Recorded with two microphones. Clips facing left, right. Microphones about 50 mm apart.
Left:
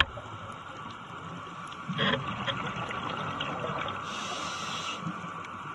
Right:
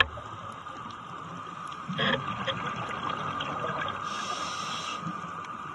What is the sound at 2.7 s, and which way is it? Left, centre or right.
Boat, left.